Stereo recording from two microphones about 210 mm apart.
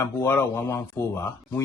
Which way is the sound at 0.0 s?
10° left (ahead or behind).